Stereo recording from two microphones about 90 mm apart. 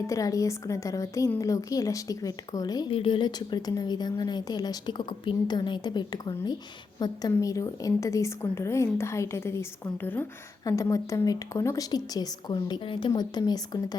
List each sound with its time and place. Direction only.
0.1 s a woman's voice: 40° left (ahead or behind)
2.9 s a woman's voice: 80° left; by 10.2 s 20° left (ahead or behind)
10.7 s a woman's voice: 35° left (ahead or behind)
12.8 s a woman's voice: 75° left (ahead or behind)
13.1 s a woman's voice: 50° left (ahead or behind)